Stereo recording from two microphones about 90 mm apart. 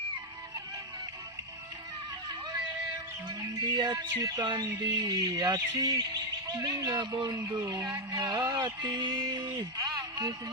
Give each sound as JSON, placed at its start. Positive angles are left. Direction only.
{"t": 3.2, "sound": "music", "side_deg": -45}
{"t": 4.4, "sound": "music", "side_deg": -55}
{"t": 4.8, "sound": "music", "side_deg": -45}
{"t": 7.6, "sound": "music", "side_deg": -40}
{"t": 9.6, "sound": "a sound", "side_deg": -45}